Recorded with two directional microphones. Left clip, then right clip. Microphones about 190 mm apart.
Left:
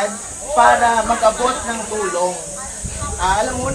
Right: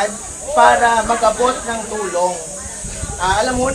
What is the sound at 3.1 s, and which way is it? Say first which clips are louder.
Speech: right 2 dB; centre (ahead or behind).